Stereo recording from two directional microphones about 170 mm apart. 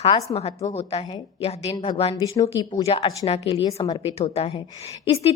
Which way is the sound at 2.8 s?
35° left (ahead or behind).